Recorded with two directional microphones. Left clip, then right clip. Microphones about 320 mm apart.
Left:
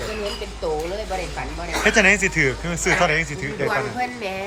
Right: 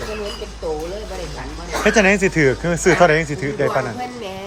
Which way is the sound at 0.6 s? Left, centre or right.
Centre.